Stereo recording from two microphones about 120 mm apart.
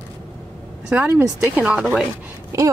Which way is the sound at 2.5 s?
25° right (ahead or behind).